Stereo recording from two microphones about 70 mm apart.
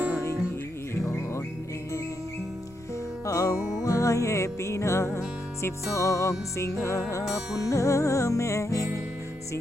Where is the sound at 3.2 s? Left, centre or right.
Left.